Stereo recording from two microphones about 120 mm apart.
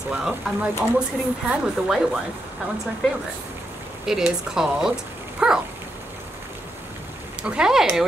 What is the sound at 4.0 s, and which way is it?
Speech, 5° right (ahead or behind).